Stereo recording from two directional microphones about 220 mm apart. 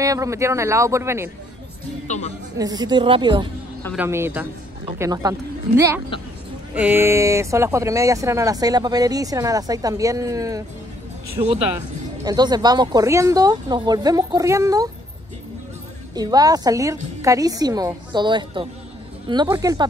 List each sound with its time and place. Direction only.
0.0 s speech: 15° right (ahead or behind)
2.0 s a woman's voice: 30° left (ahead or behind)
2.5 s a woman's voice: 15° right (ahead or behind)
3.9 s speech: 10° right (ahead or behind)
6.7 s speech: 10° right (ahead or behind)
16.2 s a woman's voice: 15° right (ahead or behind)